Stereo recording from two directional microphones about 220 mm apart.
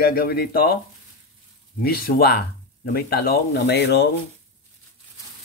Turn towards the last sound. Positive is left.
turn(degrees=50)  # may be behind; listen again after turning